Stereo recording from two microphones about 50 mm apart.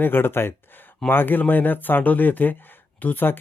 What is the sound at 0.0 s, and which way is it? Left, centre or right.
Speech, left.